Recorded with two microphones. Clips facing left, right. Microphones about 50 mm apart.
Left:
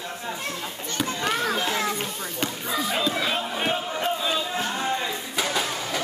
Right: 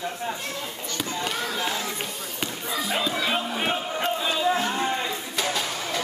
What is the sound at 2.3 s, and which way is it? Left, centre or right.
Basketball bounce, centre.